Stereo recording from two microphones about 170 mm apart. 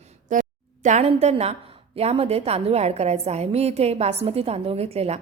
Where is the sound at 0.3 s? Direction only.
45° right (ahead or behind).